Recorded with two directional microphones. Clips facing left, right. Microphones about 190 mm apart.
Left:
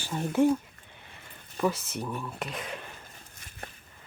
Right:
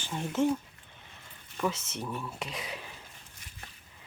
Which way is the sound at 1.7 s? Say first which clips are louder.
Left 3 dB; 55° left (ahead or behind).